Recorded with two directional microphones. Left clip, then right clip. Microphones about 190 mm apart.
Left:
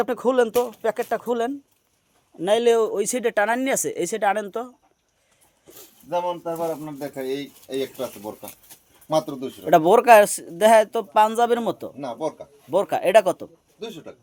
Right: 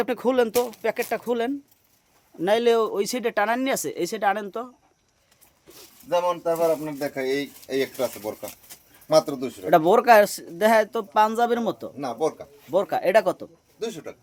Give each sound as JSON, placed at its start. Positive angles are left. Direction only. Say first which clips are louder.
{"t": 0.0, "sound": "speech", "louder": "left 2 dB", "side_deg": -5}
{"t": 6.1, "sound": "speech", "louder": "right 3 dB", "side_deg": -35}
{"t": 9.6, "sound": "speech", "louder": "left 2 dB", "side_deg": 10}
{"t": 13.7, "sound": "speech", "louder": "right 4 dB", "side_deg": -30}